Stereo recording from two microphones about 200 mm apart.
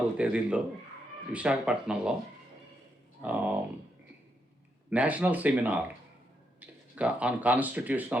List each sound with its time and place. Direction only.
0.2 s speech: 5° right (ahead or behind)
3.2 s speech: 10° right (ahead or behind)
4.9 s speech: 5° right (ahead or behind)